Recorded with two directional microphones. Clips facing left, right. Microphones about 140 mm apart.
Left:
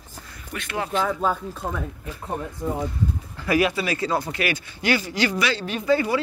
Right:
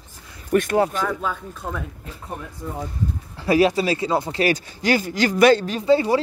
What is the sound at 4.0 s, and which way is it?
Speech, 25° right (ahead or behind).